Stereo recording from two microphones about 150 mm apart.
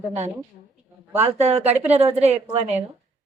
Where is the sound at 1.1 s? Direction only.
15° right (ahead or behind).